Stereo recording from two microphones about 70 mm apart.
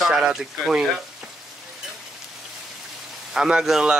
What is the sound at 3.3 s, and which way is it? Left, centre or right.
Speech, centre.